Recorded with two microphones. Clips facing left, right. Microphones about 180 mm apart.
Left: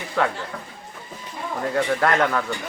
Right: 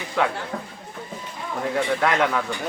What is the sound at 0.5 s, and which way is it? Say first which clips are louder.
Speech: right 4 dB; 30° right (ahead or behind).